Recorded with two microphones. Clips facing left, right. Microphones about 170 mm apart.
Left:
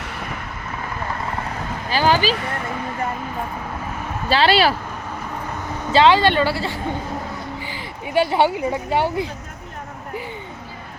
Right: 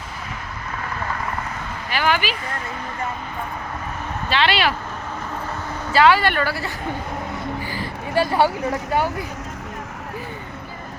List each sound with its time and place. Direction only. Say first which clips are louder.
1.9 s a sound: left 4 dB; 35° left (ahead or behind)
4.3 s speech: left 4 dB; 35° left (ahead or behind)
5.9 s a woman's voice: left 2 dB; 25° left (ahead or behind)